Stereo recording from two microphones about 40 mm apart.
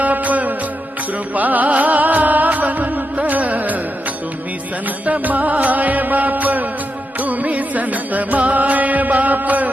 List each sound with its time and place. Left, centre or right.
0.0 s music: right
5.0 s music: right